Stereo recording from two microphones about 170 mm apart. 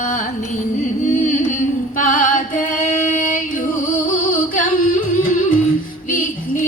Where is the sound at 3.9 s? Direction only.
55° left (ahead or behind).